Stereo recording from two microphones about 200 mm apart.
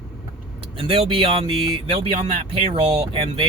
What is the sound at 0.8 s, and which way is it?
Speech, 25° right (ahead or behind).